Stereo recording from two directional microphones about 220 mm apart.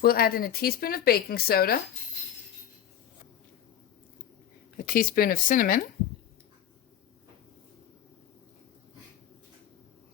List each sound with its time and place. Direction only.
0.0 s speech: 45° left (ahead or behind)
4.8 s speech: 40° left (ahead or behind)